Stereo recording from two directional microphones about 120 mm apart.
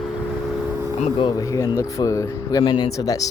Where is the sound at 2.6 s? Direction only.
40° left (ahead or behind).